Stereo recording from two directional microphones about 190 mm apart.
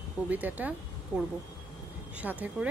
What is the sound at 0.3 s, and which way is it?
A woman's voice, 10° right (ahead or behind).